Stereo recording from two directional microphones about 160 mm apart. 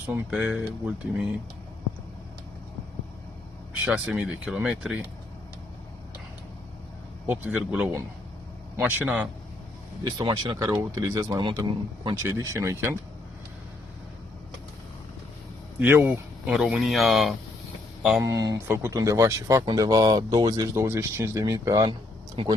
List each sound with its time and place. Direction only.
0.1 s speech: 5° right (ahead or behind)
3.8 s speech: 5° right (ahead or behind)
7.3 s speech: 10° right (ahead or behind)
10.0 s speech: 25° right (ahead or behind)
12.2 s speech: 15° right (ahead or behind)
15.8 s speech: 15° right (ahead or behind)
16.5 s speech: 5° right (ahead or behind)
18.2 s speech: 20° right (ahead or behind)
22.4 s speech: 35° right (ahead or behind)